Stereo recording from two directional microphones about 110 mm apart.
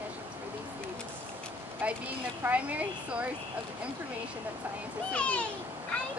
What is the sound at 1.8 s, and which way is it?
A woman's voice, 15° right (ahead or behind).